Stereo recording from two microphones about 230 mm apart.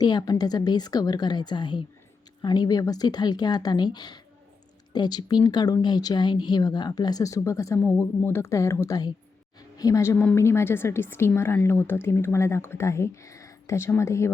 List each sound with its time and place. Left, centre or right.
0.0 s a woman's voice: centre